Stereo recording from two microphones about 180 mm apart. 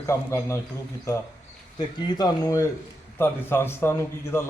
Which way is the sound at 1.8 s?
25° left (ahead or behind).